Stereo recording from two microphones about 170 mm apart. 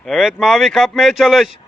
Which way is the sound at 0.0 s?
5° left (ahead or behind).